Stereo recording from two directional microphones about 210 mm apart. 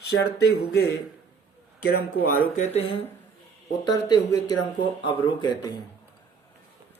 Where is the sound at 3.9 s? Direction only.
20° left (ahead or behind).